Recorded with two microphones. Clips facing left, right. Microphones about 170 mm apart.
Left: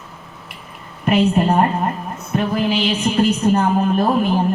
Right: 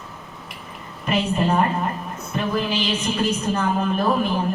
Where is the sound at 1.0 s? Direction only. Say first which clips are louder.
Left 6 dB; 60° left (ahead or behind).